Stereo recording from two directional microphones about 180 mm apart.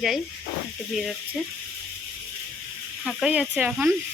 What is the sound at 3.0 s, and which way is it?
Speech, 5° right (ahead or behind).